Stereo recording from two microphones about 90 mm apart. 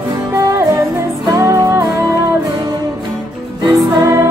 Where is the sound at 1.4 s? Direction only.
35° right (ahead or behind).